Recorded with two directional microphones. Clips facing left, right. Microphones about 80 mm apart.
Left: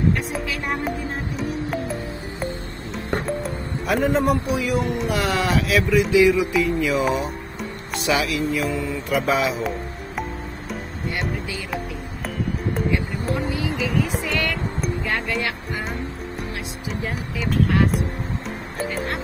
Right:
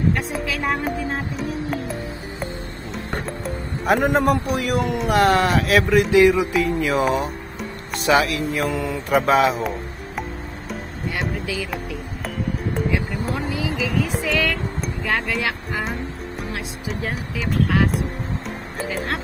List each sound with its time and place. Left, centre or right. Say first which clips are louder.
1.4 s music: even; centre
3.8 s a man's voice: right 2 dB; right
5.0 s a man's voice: right 5 dB; right
6.5 s speech: even; right
8.6 s speech: right 1 dB; right
9.6 s music: even; centre
13.7 s vehicle: even; centre
15.3 s music: right 1 dB; centre